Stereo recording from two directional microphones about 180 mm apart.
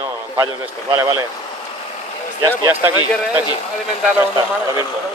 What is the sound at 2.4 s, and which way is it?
Speech, 15° right (ahead or behind).